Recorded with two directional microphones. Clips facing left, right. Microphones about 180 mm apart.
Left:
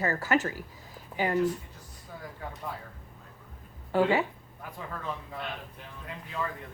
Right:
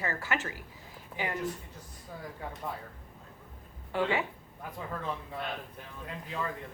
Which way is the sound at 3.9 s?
40° left (ahead or behind).